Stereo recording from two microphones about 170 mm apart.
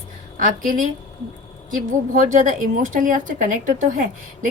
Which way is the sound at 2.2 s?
50° right (ahead or behind).